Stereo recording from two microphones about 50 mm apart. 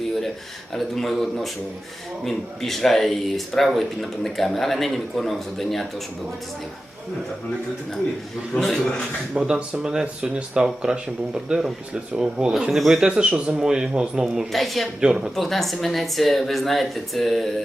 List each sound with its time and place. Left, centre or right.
0.7 s a man's voice: centre
8.5 s a man's voice: centre
9.3 s speech: centre
14.5 s a man's voice: centre
15.0 s speech: centre
15.4 s a man's voice: centre